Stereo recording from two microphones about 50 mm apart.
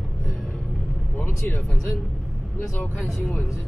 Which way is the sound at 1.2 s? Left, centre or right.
Left.